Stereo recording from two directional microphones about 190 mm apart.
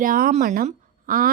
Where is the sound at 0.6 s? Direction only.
50° right (ahead or behind).